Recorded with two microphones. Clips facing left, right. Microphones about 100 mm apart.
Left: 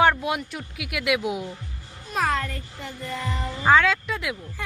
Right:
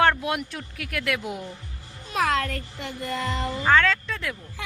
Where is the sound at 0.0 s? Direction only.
5° left (ahead or behind).